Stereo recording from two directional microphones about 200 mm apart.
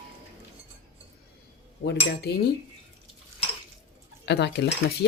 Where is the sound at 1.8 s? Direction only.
55° left (ahead or behind).